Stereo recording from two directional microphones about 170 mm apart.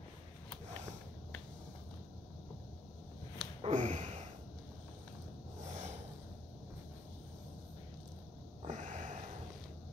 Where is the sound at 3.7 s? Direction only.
45° right (ahead or behind).